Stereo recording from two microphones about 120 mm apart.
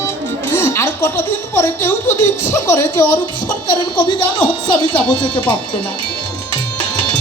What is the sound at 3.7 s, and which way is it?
Speech, 40° left (ahead or behind).